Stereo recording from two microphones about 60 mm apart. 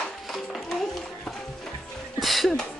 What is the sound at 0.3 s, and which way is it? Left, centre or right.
Music, centre.